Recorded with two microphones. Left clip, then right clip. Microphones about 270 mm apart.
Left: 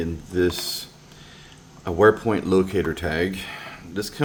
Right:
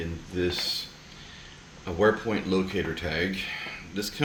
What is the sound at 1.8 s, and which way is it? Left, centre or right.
Speech, centre.